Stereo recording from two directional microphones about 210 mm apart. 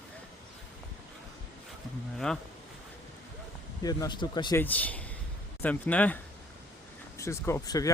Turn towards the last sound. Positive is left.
turn(degrees=15)  # may be behind; listen again after turning